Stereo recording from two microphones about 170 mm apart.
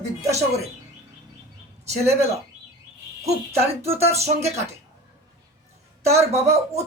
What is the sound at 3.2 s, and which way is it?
Speech, 35° right (ahead or behind).